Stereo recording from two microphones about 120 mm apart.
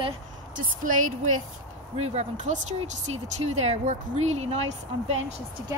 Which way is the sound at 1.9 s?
65° right (ahead or behind).